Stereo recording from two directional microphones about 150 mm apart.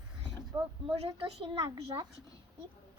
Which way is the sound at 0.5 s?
30° right (ahead or behind).